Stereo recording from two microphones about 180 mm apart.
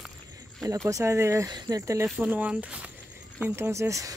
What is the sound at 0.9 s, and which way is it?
Speech, 15° right (ahead or behind).